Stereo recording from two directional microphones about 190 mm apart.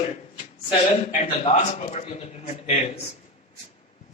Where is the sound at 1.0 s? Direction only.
35° left (ahead or behind).